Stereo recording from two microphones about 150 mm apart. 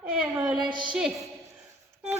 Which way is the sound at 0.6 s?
30° right (ahead or behind).